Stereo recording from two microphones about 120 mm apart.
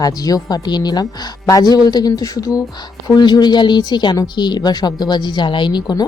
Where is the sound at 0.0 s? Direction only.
30° left (ahead or behind).